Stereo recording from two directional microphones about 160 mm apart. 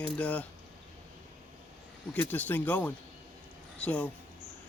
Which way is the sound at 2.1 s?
10° left (ahead or behind).